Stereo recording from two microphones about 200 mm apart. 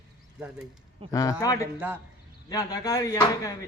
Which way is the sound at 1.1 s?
15° left (ahead or behind).